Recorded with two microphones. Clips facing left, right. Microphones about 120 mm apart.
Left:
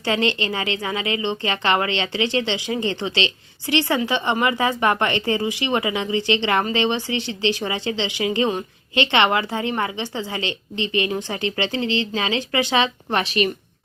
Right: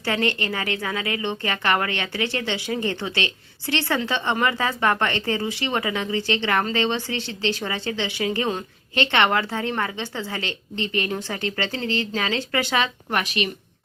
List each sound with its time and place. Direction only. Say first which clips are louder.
0.0 s a woman's voice: left 2 dB; 20° left (ahead or behind)